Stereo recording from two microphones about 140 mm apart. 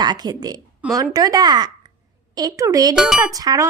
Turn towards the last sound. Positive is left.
turn(degrees=-25)  # may be behind; listen again after turning